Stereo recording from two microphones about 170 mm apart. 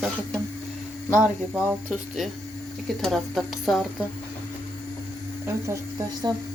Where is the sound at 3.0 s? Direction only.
Centre (ahead or behind).